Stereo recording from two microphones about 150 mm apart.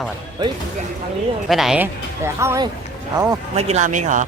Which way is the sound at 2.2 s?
20° right (ahead or behind).